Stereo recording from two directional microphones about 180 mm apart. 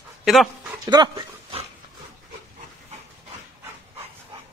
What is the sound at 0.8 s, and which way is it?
Speech, 25° right (ahead or behind).